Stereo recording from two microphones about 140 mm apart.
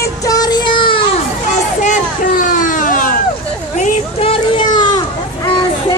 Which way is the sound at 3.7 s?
60° left (ahead or behind).